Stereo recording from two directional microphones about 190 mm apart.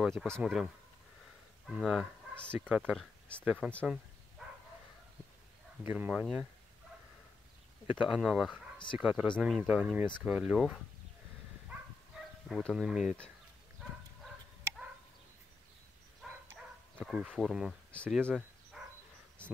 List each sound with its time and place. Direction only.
0.0 s speech: centre (ahead or behind)
1.8 s speech: centre (ahead or behind)
2.8 s speech: 5° left (ahead or behind)
5.9 s speech: 10° right (ahead or behind)
7.8 s speech: 5° right (ahead or behind)
12.4 s speech: centre (ahead or behind)
16.2 s a sound: centre (ahead or behind)
17.0 s speech: centre (ahead or behind)